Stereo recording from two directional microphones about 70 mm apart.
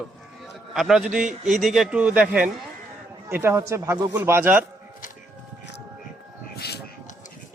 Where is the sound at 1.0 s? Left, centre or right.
Centre.